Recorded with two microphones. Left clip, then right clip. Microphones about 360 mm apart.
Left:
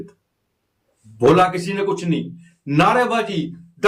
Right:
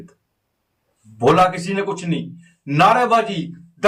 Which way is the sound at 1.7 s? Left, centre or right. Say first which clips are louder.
Left 2 dB; centre.